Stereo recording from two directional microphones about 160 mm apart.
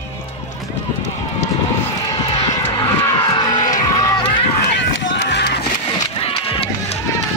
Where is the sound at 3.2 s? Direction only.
25° left (ahead or behind).